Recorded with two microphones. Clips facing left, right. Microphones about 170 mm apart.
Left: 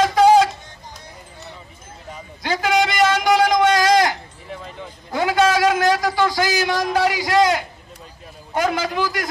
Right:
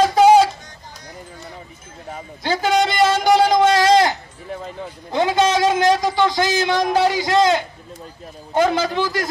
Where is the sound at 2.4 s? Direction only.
30° right (ahead or behind).